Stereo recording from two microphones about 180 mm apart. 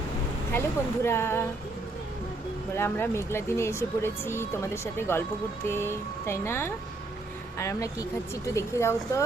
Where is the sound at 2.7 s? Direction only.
15° left (ahead or behind).